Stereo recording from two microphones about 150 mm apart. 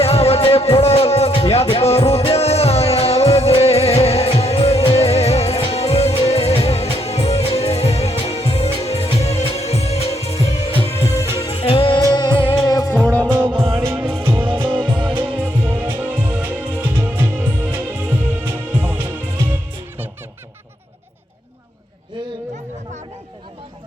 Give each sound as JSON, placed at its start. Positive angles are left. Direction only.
{"t": 0.0, "sound": "music", "side_deg": 40}
{"t": 10.8, "sound": "music", "side_deg": 15}
{"t": 11.4, "sound": "music", "side_deg": 40}
{"t": 12.6, "sound": "music", "side_deg": 25}
{"t": 13.2, "sound": "music", "side_deg": -10}
{"t": 13.5, "sound": "music", "side_deg": -35}
{"t": 13.7, "sound": "music", "side_deg": -15}
{"t": 14.4, "sound": "music", "side_deg": -35}
{"t": 15.4, "sound": "music", "side_deg": -10}